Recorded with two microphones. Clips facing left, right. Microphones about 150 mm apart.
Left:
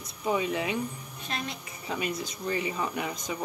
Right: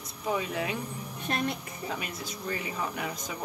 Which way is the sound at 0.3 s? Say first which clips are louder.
Left 2 dB; centre (ahead or behind).